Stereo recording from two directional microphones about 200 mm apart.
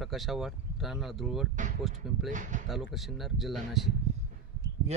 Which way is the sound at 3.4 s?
Centre (ahead or behind).